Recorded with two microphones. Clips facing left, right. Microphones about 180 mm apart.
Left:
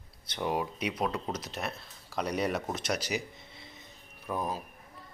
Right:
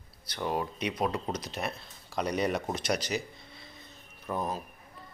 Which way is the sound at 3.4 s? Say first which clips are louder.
Even; 20° left (ahead or behind).